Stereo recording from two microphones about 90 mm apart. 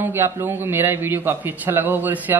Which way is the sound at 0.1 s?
25° right (ahead or behind).